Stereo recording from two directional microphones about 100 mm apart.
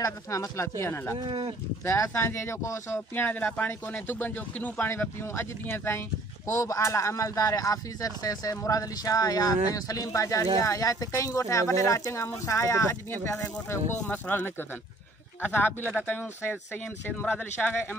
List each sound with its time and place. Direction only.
0.0 s speech: 30° left (ahead or behind)
1.2 s speech: 65° right (ahead or behind)
1.9 s speech: 30° left (ahead or behind)
14.0 s speech: 15° left (ahead or behind)